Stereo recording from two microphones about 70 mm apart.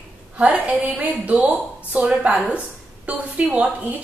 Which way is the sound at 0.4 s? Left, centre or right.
Centre.